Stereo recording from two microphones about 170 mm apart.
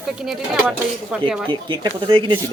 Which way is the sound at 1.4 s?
30° right (ahead or behind).